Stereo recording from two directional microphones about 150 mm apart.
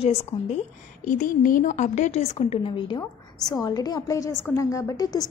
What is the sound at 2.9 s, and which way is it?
A woman's voice, 25° left (ahead or behind).